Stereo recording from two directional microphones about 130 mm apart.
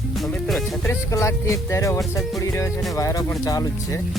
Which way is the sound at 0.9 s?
20° left (ahead or behind).